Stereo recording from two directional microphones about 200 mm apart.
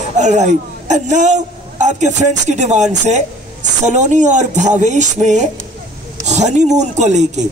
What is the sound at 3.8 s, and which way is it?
A man's voice, 35° right (ahead or behind).